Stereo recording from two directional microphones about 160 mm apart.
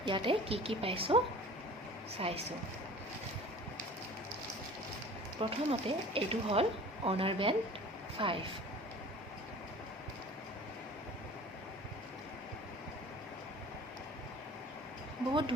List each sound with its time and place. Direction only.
0.0 s speech: 30° right (ahead or behind)
5.4 s speech: 35° right (ahead or behind)
15.3 s speech: 30° right (ahead or behind)